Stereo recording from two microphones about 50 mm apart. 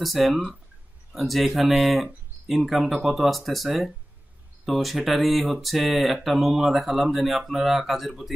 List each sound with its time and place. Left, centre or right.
0.0 s speech: centre